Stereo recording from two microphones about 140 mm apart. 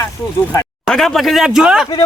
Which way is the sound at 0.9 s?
Centre (ahead or behind).